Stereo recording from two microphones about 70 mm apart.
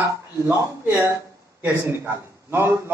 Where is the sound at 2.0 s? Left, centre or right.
Right.